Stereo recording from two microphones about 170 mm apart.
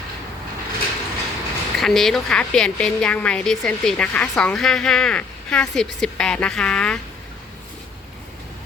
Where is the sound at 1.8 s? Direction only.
Centre (ahead or behind).